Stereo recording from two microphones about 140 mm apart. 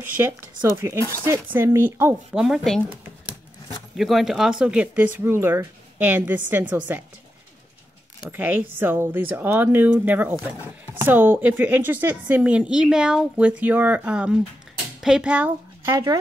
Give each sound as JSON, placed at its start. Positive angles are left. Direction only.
{"t": 0.2, "sound": "a woman's voice", "side_deg": -15}
{"t": 2.3, "sound": "speech", "side_deg": 0}
{"t": 3.9, "sound": "a woman's voice", "side_deg": 0}
{"t": 8.3, "sound": "a woman's voice", "side_deg": -15}